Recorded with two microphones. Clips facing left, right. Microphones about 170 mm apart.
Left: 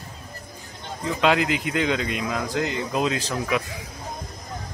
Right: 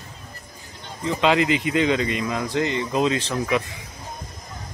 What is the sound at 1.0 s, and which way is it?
Speech, centre (ahead or behind).